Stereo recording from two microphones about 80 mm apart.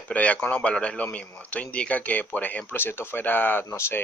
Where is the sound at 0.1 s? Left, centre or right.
Centre.